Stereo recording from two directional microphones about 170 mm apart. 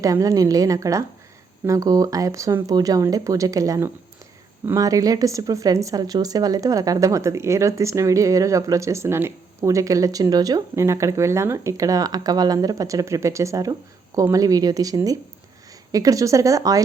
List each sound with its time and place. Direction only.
0.0 s speech: 20° right (ahead or behind)